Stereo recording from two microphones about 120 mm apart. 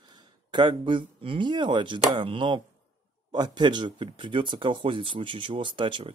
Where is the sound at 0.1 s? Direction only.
40° right (ahead or behind).